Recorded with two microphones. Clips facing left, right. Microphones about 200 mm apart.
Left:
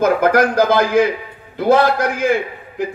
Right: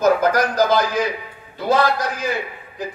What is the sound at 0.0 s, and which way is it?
A man's voice, 55° left (ahead or behind).